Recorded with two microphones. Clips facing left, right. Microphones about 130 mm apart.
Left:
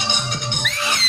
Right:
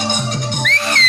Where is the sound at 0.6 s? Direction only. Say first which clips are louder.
Right 4 dB; 5° left (ahead or behind).